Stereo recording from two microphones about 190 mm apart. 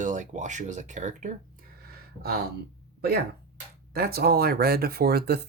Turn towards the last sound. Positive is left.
turn(degrees=-55)  # may be behind; listen again after turning